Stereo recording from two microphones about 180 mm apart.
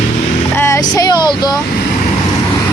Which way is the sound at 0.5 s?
15° left (ahead or behind).